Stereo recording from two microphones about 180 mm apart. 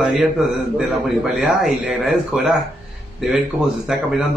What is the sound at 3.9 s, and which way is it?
Speech, 5° right (ahead or behind).